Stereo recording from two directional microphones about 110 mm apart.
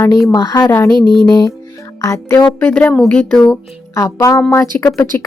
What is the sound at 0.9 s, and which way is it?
Music, 45° right (ahead or behind).